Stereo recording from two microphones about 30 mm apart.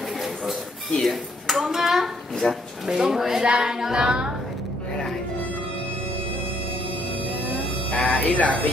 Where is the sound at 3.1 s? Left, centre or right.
Centre.